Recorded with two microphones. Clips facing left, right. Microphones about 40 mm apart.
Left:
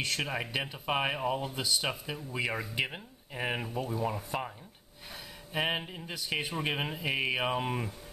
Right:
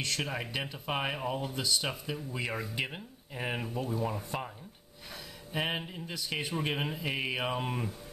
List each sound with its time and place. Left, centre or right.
0.0 s speech: centre
5.5 s speech: centre